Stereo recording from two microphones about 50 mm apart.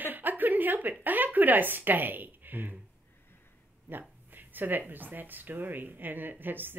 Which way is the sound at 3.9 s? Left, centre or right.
Right.